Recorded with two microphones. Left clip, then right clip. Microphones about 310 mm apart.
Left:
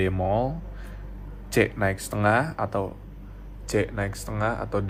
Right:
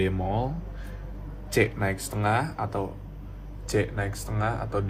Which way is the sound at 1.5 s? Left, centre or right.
Left.